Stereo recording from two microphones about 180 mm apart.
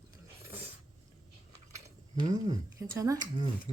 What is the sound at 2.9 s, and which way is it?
Speech, 20° right (ahead or behind).